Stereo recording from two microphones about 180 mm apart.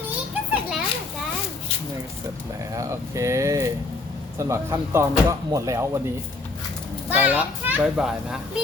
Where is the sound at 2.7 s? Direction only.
15° right (ahead or behind).